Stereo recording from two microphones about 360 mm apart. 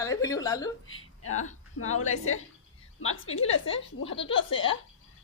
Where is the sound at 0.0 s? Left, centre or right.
Centre.